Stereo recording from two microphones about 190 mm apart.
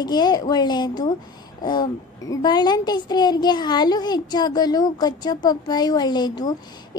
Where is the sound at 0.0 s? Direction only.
20° left (ahead or behind).